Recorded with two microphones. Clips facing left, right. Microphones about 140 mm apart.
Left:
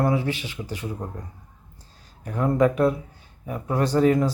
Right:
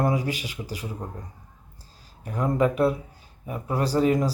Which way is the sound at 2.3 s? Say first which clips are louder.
Left 3 dB; 10° right (ahead or behind).